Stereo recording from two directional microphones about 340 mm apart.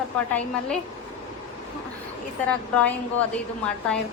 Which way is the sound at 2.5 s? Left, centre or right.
Centre.